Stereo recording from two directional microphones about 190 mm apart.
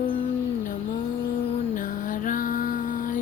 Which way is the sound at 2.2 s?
45° left (ahead or behind).